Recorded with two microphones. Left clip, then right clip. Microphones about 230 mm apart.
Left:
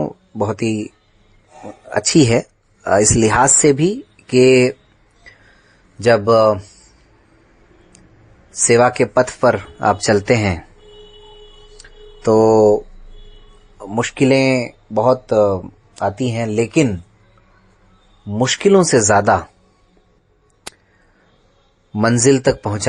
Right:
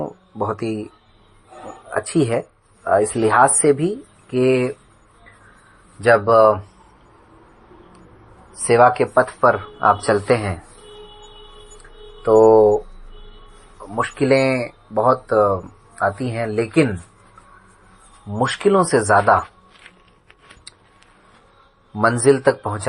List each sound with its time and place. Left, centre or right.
0.0 s speech: left
6.0 s speech: left
8.6 s speech: left
11.8 s a sound: left
13.7 s speech: left
18.3 s speech: left
21.9 s speech: left